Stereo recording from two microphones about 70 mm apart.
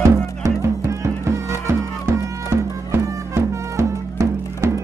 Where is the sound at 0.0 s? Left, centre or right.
Right.